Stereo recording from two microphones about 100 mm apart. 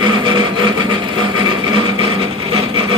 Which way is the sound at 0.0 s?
50° right (ahead or behind).